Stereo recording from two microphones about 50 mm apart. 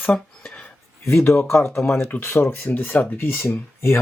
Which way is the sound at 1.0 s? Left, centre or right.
Left.